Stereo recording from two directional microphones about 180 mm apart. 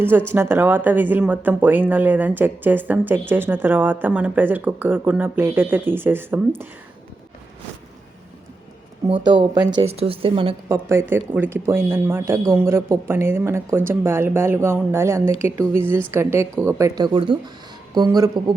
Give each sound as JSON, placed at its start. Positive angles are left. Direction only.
{"t": 0.3, "sound": "speech", "side_deg": -15}
{"t": 9.2, "sound": "speech", "side_deg": -25}
{"t": 9.8, "sound": "speech", "side_deg": -35}
{"t": 10.7, "sound": "speech", "side_deg": -15}